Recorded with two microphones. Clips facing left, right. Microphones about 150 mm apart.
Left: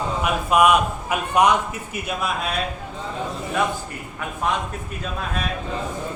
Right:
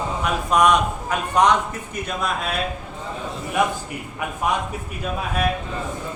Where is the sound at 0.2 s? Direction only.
5° left (ahead or behind).